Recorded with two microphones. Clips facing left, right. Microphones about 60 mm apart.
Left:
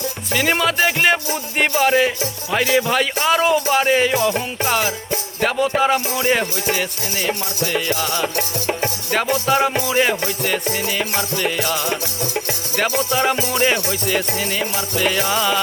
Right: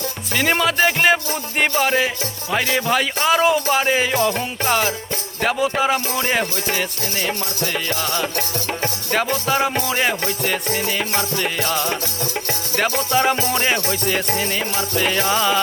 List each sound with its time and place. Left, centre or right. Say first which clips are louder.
0.3 s speech: even; centre
4.1 s music: left 1 dB; centre
5.4 s speech: left 1 dB; centre
6.1 s music: left 2 dB; centre
9.5 s speech: left 3 dB; centre
9.7 s music: left 2 dB; centre
11.8 s music: even; centre
13.1 s speech: right 2 dB; centre
13.4 s music: left 1 dB; centre
15.3 s speech: right 1 dB; centre